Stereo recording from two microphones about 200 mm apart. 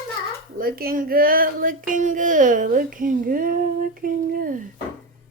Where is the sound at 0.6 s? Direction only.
45° right (ahead or behind).